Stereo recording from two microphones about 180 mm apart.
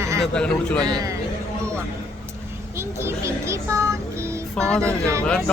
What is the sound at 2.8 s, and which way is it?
Speech, 15° right (ahead or behind).